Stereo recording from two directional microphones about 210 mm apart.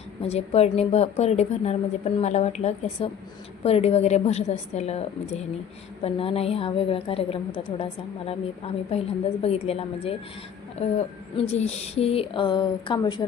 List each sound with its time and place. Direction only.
0.2 s a woman's voice: 30° left (ahead or behind)